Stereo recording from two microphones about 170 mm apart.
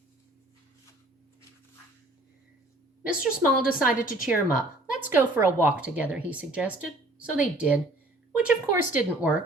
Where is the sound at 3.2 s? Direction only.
5° right (ahead or behind).